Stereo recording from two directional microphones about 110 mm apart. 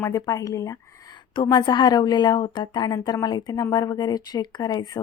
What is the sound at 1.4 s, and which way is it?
Speech, 40° left (ahead or behind).